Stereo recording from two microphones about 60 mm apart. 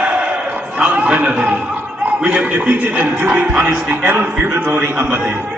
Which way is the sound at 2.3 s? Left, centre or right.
Right.